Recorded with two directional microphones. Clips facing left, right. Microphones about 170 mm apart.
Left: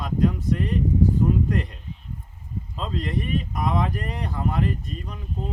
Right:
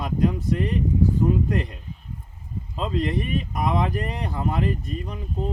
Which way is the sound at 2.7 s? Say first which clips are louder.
Right 4 dB; 20° right (ahead or behind).